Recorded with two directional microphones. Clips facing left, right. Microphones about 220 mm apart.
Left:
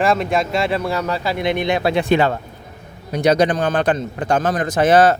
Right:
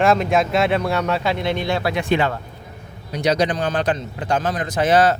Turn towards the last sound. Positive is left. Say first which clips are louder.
# left 3 dB
turn(degrees=50)  # may be behind; listen again after turning